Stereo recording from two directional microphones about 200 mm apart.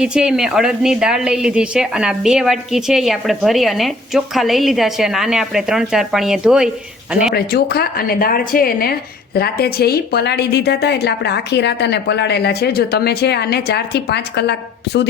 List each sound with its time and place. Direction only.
0.0 s a woman's voice: 5° right (ahead or behind)
7.3 s speech: 50° left (ahead or behind)